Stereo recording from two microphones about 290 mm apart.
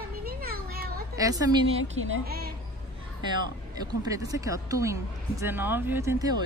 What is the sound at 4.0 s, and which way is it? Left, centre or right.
Speech, centre.